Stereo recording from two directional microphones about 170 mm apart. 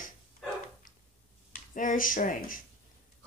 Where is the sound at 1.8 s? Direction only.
50° left (ahead or behind).